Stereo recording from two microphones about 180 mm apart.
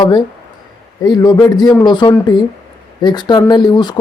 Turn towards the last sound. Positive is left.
turn(degrees=25)  # may be behind; listen again after turning